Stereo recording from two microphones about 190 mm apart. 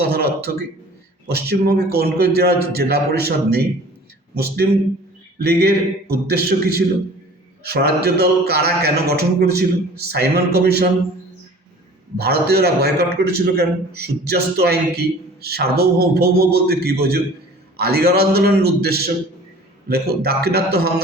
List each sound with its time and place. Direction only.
0.0 s a sound: 55° right (ahead or behind)
1.3 s a man's voice: 55° right (ahead or behind)
5.4 s a man's voice: 55° right (ahead or behind)
12.1 s a man's voice: 55° right (ahead or behind)